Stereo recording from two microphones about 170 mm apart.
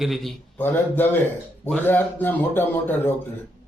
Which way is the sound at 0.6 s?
10° left (ahead or behind).